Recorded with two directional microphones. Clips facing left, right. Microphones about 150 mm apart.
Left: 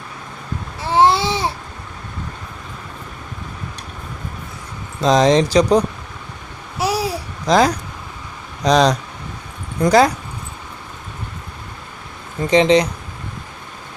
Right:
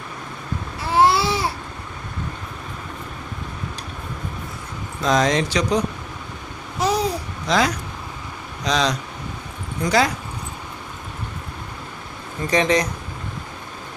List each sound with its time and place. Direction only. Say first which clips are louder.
0.9 s babbling: left 2 dB; 25° left (ahead or behind)
5.0 s speech: left 6 dB; 30° left (ahead or behind)
6.7 s babbling: even; 10° left (ahead or behind)
7.4 s speech: left 6 dB; 40° left (ahead or behind)
12.5 s speech: left 6 dB; 25° left (ahead or behind)